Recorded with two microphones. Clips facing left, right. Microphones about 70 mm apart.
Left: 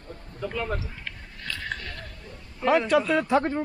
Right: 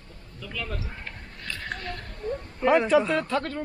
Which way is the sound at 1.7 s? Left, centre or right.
Right.